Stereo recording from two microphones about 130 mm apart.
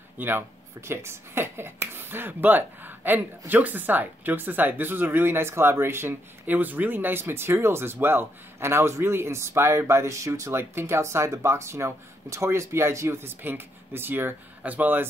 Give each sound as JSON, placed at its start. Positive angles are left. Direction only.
{"t": 0.2, "sound": "speech", "side_deg": -15}